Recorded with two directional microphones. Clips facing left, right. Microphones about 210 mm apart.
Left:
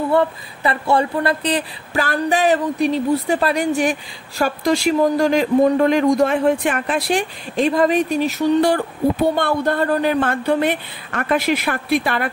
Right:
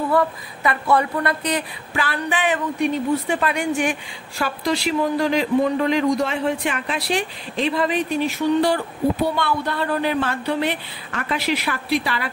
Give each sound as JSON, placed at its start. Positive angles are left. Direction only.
{"t": 0.1, "sound": "speech", "side_deg": 25}